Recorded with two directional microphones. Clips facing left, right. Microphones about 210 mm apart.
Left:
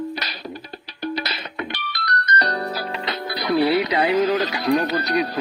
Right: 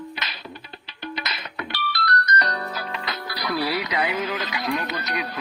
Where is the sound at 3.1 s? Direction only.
25° left (ahead or behind).